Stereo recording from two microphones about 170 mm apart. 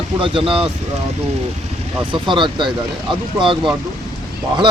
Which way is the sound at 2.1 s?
30° right (ahead or behind).